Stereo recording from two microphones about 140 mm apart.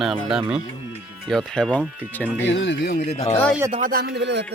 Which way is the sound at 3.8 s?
90° right.